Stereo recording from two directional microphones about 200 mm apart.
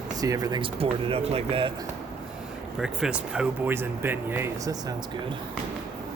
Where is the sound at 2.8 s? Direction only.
5° right (ahead or behind).